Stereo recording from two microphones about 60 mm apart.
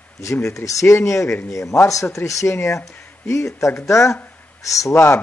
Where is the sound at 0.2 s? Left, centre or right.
Left.